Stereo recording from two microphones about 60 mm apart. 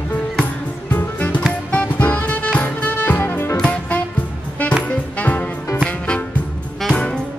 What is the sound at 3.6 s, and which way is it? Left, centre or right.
Music, left.